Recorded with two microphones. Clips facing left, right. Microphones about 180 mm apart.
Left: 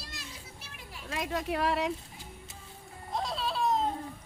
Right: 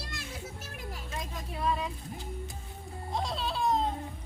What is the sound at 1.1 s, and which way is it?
Speech, 85° left.